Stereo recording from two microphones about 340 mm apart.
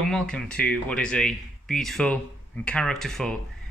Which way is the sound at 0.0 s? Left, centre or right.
Centre.